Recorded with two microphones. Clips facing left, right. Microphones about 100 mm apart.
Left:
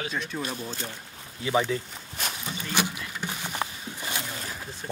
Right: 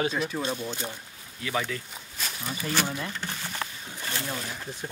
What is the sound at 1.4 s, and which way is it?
Speech, 25° left (ahead or behind).